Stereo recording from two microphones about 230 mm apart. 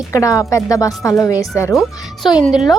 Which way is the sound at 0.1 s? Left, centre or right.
Centre.